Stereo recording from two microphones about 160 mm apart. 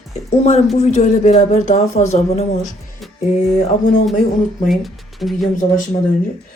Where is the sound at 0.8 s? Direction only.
45° left (ahead or behind).